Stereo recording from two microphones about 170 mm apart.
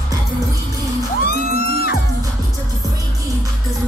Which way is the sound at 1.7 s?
65° left (ahead or behind).